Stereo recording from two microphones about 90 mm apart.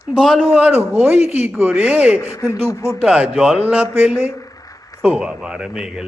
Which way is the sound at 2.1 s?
30° left (ahead or behind).